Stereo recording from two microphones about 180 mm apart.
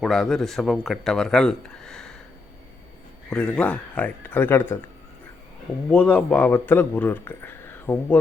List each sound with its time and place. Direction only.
0.0 s speech: centre (ahead or behind)
3.2 s speech: 5° left (ahead or behind)
5.9 s speech: 5° left (ahead or behind)